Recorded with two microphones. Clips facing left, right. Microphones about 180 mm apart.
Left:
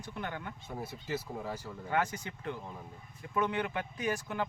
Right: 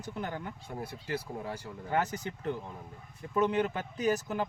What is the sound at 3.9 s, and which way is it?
Speech, 40° right (ahead or behind).